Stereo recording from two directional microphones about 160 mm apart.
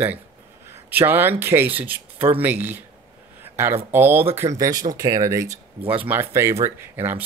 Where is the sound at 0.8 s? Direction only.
10° right (ahead or behind).